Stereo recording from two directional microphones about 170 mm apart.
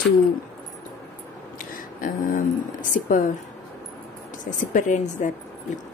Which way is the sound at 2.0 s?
50° left (ahead or behind).